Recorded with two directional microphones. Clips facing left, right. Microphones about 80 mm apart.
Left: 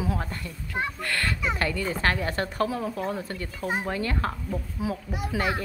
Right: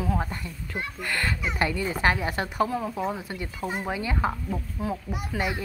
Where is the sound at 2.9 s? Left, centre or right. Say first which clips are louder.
Even; centre.